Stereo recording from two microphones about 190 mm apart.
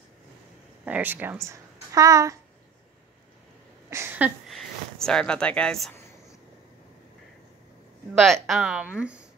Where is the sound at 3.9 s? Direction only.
10° right (ahead or behind).